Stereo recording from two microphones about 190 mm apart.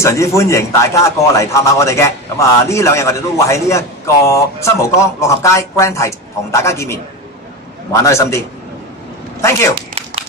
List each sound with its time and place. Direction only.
0.0 s a man's voice: 15° left (ahead or behind)
9.4 s a man's voice: 15° left (ahead or behind)
9.8 s a sound: 30° right (ahead or behind)